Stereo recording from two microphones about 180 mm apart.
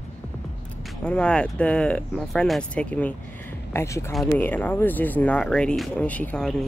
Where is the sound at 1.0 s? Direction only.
5° left (ahead or behind).